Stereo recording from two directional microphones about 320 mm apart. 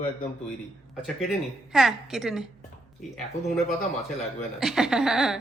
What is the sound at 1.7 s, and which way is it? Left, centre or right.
Speech, centre.